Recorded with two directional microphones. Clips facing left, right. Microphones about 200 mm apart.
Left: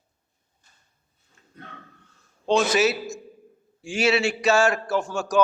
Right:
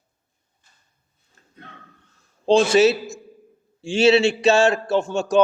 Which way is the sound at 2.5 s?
30° right (ahead or behind).